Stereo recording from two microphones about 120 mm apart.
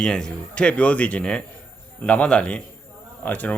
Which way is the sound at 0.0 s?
5° left (ahead or behind).